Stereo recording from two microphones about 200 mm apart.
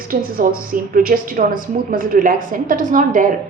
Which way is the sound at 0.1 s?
45° right (ahead or behind).